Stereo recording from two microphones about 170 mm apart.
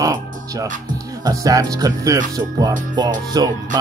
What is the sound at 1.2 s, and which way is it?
Speech, 20° right (ahead or behind).